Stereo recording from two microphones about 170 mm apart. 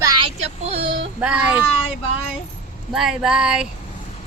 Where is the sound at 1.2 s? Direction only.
10° right (ahead or behind).